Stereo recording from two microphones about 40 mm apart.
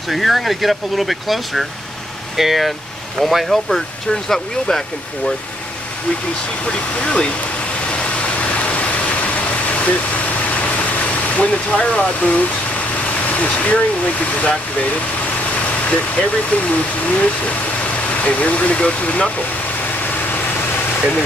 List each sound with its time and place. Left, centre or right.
0.1 s speech: centre
6.6 s speech: left
7.8 s vehicle: left
13.3 s speech: left
15.9 s speech: left